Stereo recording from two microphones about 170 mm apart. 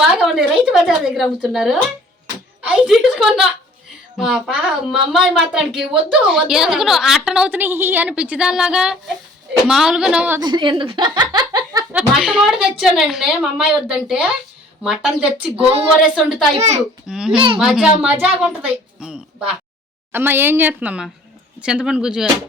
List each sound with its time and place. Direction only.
0.0 s a woman's voice: centre (ahead or behind)
10.4 s speech: 30° right (ahead or behind)
11.9 s a woman's voice: 5° right (ahead or behind)
15.5 s child singing: 35° right (ahead or behind)
16.0 s a woman's voice: 5° right (ahead or behind)
16.6 s child singing: 40° right (ahead or behind)
17.1 s a woman's voice: 5° right (ahead or behind)